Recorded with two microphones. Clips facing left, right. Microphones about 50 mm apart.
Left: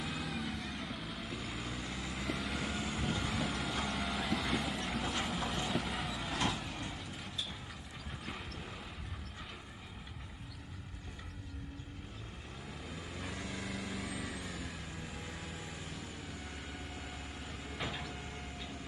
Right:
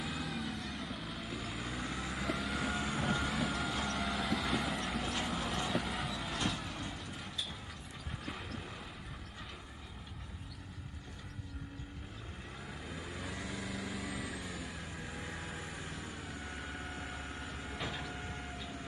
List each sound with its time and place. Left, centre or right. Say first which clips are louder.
0.0 s vehicle: even; centre
12.8 s vehicle: right 1 dB; centre
14.9 s vehicle: right 2 dB; centre
15.4 s vehicle: right 2 dB; right
15.7 s vehicle: right 2 dB; centre